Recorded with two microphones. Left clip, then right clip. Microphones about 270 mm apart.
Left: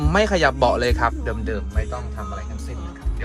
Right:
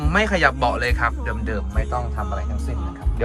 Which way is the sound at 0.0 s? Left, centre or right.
Centre.